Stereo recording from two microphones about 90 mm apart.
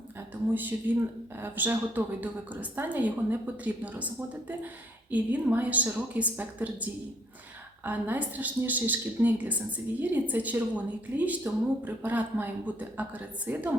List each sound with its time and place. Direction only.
0.5 s a woman's voice: 20° right (ahead or behind)
7.9 s a woman's voice: 20° right (ahead or behind)